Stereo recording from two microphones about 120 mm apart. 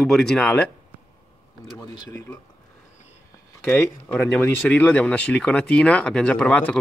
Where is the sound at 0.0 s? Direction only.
5° left (ahead or behind).